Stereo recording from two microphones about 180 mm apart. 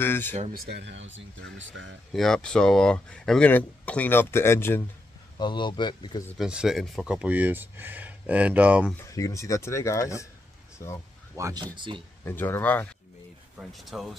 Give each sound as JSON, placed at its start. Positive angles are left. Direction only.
{"t": 0.0, "sound": "speech", "side_deg": 10}
{"t": 0.7, "sound": "speech", "side_deg": -70}
{"t": 2.1, "sound": "speech", "side_deg": 5}
{"t": 5.4, "sound": "speech", "side_deg": 25}
{"t": 6.3, "sound": "speech", "side_deg": -5}
{"t": 9.1, "sound": "speech", "side_deg": 15}
{"t": 11.3, "sound": "speech", "side_deg": -15}
{"t": 11.7, "sound": "speech", "side_deg": -25}
{"t": 12.3, "sound": "speech", "side_deg": 10}
{"t": 13.6, "sound": "speech", "side_deg": 0}